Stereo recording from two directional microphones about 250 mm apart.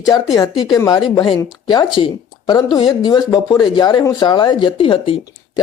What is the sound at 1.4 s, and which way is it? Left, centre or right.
Speech, centre.